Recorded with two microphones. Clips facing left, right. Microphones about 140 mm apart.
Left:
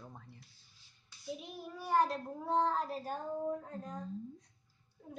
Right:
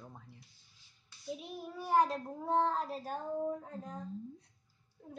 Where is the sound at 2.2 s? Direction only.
5° right (ahead or behind).